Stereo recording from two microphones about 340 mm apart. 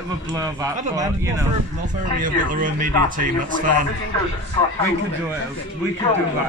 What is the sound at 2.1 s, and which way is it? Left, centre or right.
A man's voice, right.